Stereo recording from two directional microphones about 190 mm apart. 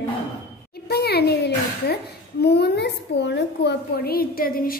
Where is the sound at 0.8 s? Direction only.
55° left (ahead or behind).